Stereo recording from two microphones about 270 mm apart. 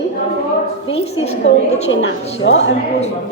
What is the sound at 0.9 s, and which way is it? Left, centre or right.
Speech, left.